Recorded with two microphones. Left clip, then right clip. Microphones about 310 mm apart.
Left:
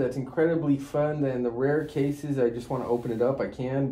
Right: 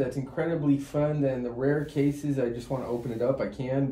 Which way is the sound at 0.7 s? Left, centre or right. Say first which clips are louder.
Left 1 dB; centre.